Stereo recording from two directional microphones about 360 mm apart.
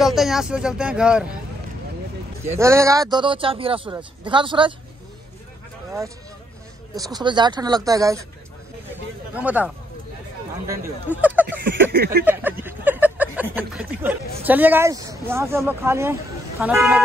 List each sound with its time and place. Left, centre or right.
0.0 s speech: centre
2.5 s speech: centre
7.0 s speech: centre
9.3 s speech: centre
10.7 s speech: centre
11.9 s a sound: right
12.3 s speech: centre